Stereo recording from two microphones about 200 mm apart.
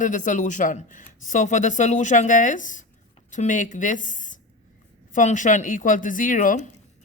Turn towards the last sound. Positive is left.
turn(degrees=40)  # may be behind; listen again after turning